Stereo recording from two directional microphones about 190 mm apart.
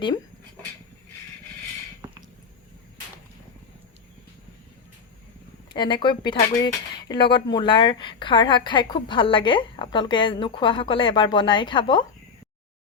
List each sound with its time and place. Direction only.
5.7 s a woman's voice: 25° left (ahead or behind)